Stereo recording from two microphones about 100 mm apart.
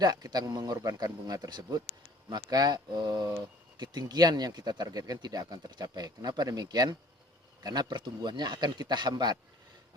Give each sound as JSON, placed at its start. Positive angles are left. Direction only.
{"t": 0.0, "sound": "speech", "side_deg": -40}